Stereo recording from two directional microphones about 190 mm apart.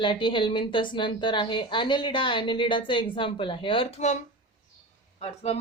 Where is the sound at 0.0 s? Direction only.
25° left (ahead or behind).